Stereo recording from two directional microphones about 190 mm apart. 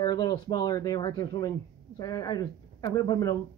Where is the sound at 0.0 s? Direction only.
20° left (ahead or behind).